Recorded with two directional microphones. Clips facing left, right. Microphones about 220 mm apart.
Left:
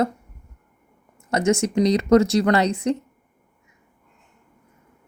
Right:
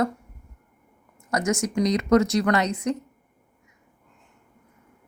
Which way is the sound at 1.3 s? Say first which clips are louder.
Left 4 dB; 25° left (ahead or behind).